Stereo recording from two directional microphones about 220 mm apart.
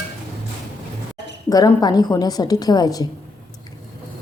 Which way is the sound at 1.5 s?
15° left (ahead or behind).